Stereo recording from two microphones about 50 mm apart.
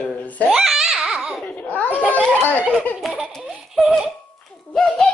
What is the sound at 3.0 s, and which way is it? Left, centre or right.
Baby laughter, centre.